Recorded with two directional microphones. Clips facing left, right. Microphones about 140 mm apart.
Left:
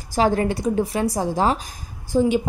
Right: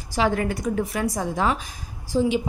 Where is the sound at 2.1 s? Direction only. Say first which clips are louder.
Left 3 dB; 50° left (ahead or behind).